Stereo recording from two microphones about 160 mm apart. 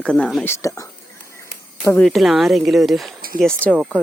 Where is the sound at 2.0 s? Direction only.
Centre (ahead or behind).